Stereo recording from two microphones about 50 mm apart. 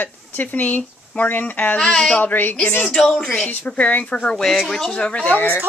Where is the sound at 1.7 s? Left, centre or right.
Centre.